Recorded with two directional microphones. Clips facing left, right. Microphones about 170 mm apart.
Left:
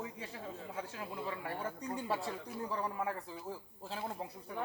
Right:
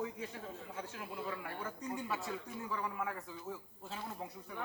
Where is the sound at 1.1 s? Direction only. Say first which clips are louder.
Left 2 dB; 30° left (ahead or behind).